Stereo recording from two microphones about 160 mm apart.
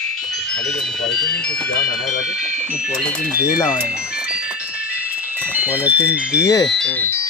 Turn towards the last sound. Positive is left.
turn(degrees=5)  # may be behind; listen again after turning